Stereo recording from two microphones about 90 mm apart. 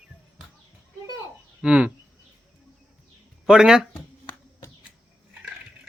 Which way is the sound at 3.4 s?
5° right (ahead or behind).